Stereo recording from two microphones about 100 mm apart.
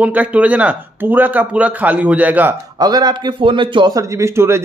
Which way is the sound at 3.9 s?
30° right (ahead or behind).